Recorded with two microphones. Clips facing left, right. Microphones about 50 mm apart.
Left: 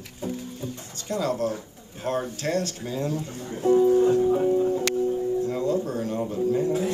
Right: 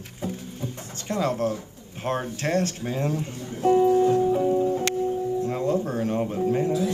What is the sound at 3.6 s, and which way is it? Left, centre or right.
A man's voice, right.